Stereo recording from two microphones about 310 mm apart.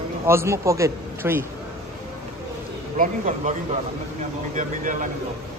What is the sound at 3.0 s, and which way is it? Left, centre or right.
Speech, right.